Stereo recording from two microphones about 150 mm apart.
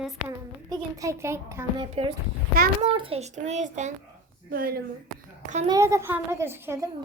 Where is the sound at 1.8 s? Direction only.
35° right (ahead or behind); by 3.9 s 50° right (ahead or behind).